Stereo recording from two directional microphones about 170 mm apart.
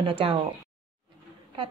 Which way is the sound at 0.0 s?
30° right (ahead or behind).